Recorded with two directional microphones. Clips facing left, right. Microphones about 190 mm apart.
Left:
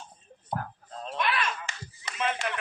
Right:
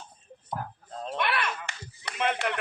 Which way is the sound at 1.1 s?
60° right (ahead or behind).